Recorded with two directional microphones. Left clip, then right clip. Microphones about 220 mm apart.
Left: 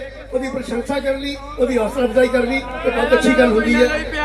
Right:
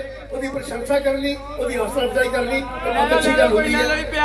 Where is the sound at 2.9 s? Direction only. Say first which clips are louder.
Left 1 dB; 45° right (ahead or behind).